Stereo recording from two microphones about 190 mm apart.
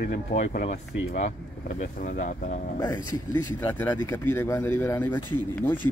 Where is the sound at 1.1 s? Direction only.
35° left (ahead or behind).